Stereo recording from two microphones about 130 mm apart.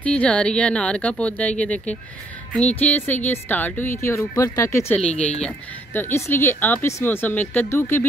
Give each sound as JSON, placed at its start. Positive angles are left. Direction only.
{"t": 0.0, "sound": "speech", "side_deg": 10}
{"t": 4.9, "sound": "speech", "side_deg": 10}
{"t": 5.9, "sound": "speech", "side_deg": 20}